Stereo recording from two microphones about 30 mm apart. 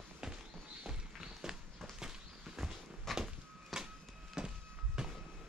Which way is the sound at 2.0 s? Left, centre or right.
Right.